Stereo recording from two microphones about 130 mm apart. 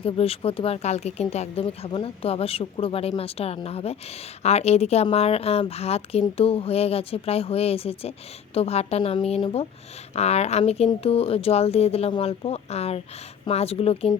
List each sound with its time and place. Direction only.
0.0 s speech: 45° left (ahead or behind)
1.6 s speech: 40° left (ahead or behind)